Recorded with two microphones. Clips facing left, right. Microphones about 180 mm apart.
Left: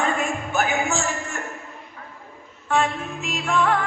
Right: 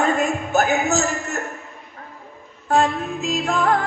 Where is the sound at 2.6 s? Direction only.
40° right (ahead or behind).